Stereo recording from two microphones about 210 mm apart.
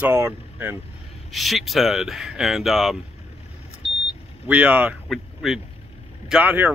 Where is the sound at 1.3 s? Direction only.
Centre (ahead or behind).